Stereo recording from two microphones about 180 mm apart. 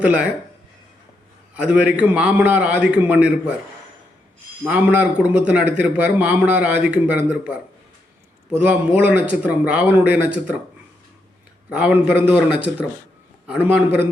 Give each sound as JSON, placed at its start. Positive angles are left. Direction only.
{"t": 0.0, "sound": "a man's voice", "side_deg": -5}
{"t": 1.5, "sound": "a man's voice", "side_deg": -5}
{"t": 4.6, "sound": "a man's voice", "side_deg": -5}
{"t": 11.7, "sound": "a man's voice", "side_deg": -5}